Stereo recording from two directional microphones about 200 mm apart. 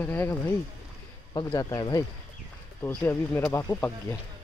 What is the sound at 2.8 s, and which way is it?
Speech, 10° left (ahead or behind).